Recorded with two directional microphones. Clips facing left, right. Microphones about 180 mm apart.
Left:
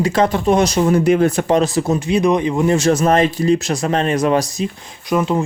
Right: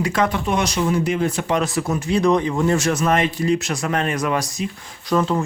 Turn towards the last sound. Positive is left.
turn(degrees=15)  # may be behind; listen again after turning